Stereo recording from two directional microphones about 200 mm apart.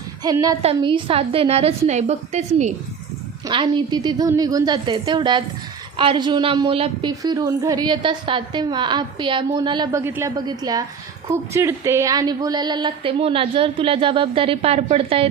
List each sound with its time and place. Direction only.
0.2 s a woman's voice: 20° right (ahead or behind); by 2.7 s 35° right (ahead or behind)
3.4 s a woman's voice: 20° right (ahead or behind)